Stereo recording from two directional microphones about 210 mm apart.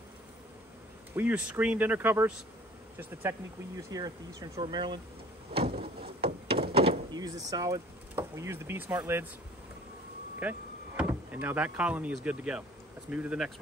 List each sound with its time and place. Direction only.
1.1 s speech: 5° right (ahead or behind)
5.5 s a sound: 25° right (ahead or behind)
5.8 s a sound: 50° right (ahead or behind)
6.2 s door: 25° right (ahead or behind)
6.7 s speech: 25° right (ahead or behind); by 9.2 s 10° right (ahead or behind)
10.4 s speech: 5° right (ahead or behind)